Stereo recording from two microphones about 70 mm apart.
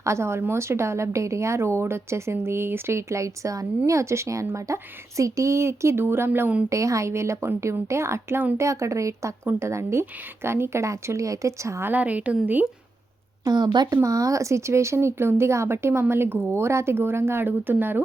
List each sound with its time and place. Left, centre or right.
0.0 s a woman's voice: right
6.7 s a woman's voice: right
9.4 s a woman's voice: right
11.9 s a woman's voice: right
13.4 s a woman's voice: right
13.9 s a woman's voice: right